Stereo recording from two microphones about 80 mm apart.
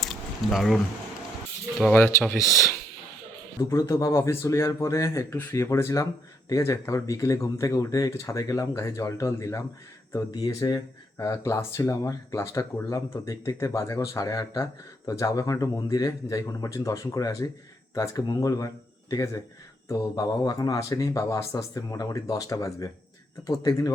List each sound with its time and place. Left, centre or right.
0.0 s a sound: centre
1.9 s speech: left
3.6 s speech: left
19.9 s speech: left